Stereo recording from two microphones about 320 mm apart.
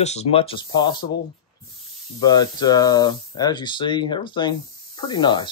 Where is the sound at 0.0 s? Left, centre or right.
Centre.